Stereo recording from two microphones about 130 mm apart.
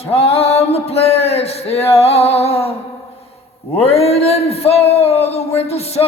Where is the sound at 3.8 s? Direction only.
50° left (ahead or behind).